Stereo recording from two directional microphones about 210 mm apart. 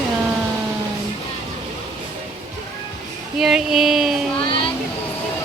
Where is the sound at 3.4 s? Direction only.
Centre (ahead or behind).